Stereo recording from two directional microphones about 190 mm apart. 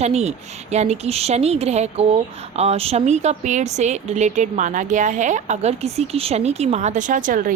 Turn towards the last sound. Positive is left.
turn(degrees=-45)  # may be behind; listen again after turning